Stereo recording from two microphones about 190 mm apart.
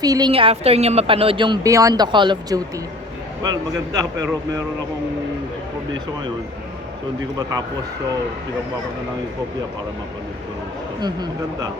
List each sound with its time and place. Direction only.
0.0 s a woman's voice: 20° right (ahead or behind)
11.0 s a woman's voice: 20° right (ahead or behind)